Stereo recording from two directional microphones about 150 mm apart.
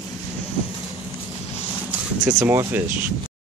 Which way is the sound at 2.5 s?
20° right (ahead or behind).